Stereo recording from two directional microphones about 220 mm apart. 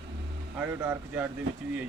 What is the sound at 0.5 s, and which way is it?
Speech, 10° right (ahead or behind).